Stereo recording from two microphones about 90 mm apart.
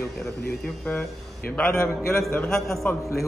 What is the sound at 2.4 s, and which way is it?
Speech, centre (ahead or behind).